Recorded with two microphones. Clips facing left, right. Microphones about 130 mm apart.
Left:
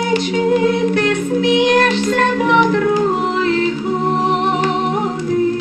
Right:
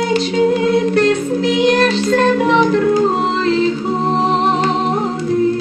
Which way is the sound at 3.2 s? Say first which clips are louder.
Right 1 dB; 30° right (ahead or behind).